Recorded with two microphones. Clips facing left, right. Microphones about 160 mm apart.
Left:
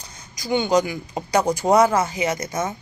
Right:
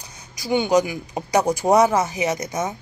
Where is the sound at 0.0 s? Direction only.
10° right (ahead or behind).